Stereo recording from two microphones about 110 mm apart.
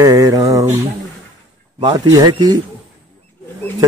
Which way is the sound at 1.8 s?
45° right (ahead or behind).